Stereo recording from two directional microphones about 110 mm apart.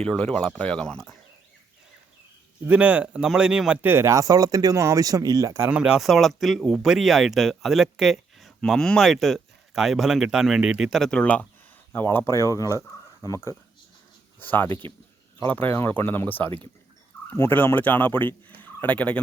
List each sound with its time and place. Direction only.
0.0 s speech: 5° left (ahead or behind)
2.6 s speech: 10° right (ahead or behind); by 5.7 s 30° right (ahead or behind)
5.7 s speech: 10° right (ahead or behind); by 11.4 s 10° left (ahead or behind)
11.9 s speech: 20° left (ahead or behind)
14.3 s speech: 15° left (ahead or behind)
18.4 s turkey: 15° left (ahead or behind)